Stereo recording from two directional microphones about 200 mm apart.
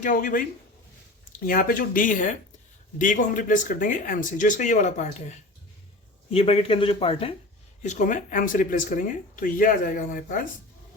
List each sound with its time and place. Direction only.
0.0 s speech: 45° left (ahead or behind)
1.5 s speech: 45° left (ahead or behind); by 7.3 s 30° left (ahead or behind)
7.8 s speech: 40° left (ahead or behind)